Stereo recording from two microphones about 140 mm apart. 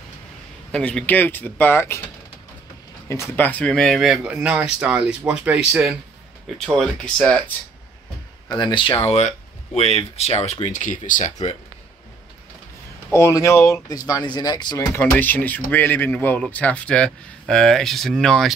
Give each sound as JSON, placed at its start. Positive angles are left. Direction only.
{"t": 0.7, "sound": "speech", "side_deg": 5}
{"t": 3.1, "sound": "speech", "side_deg": 15}
{"t": 8.5, "sound": "speech", "side_deg": 30}
{"t": 13.1, "sound": "speech", "side_deg": 20}
{"t": 15.0, "sound": "speech", "side_deg": 15}